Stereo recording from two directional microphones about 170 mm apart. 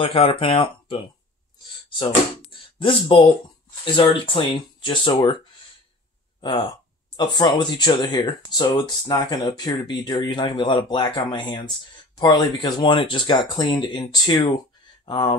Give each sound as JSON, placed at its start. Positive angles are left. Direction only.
{"t": 0.0, "sound": "speech", "side_deg": 30}
{"t": 2.8, "sound": "speech", "side_deg": 30}
{"t": 7.2, "sound": "speech", "side_deg": 25}